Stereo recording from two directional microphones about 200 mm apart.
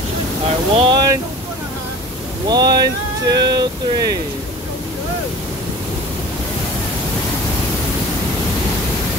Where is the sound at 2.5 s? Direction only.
20° right (ahead or behind).